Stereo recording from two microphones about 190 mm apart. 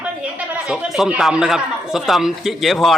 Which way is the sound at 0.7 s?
5° right (ahead or behind).